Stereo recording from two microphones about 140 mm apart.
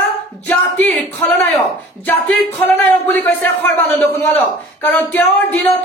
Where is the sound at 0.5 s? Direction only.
10° left (ahead or behind).